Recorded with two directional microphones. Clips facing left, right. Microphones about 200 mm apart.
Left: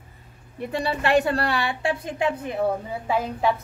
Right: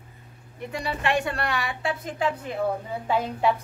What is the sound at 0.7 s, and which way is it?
A woman's voice, 35° left (ahead or behind).